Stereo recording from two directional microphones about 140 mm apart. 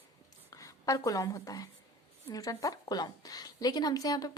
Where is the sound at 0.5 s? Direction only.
25° left (ahead or behind).